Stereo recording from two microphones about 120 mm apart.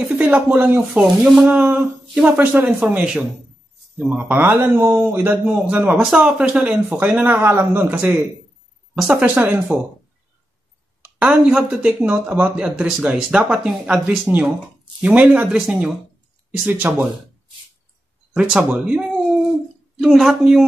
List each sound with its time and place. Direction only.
0.2 s speech: 15° right (ahead or behind)
1.0 s speech: 5° right (ahead or behind)
9.1 s speech: 15° right (ahead or behind)
11.1 s speech: 10° right (ahead or behind)
18.3 s speech: 10° right (ahead or behind)
20.0 s speech: centre (ahead or behind)